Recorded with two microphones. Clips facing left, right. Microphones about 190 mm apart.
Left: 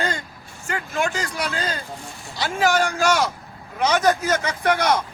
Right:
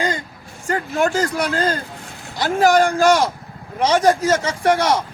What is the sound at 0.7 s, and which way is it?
A man's voice, 35° right (ahead or behind).